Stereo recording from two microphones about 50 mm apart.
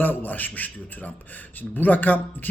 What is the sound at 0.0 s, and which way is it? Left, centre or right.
A man's voice, left.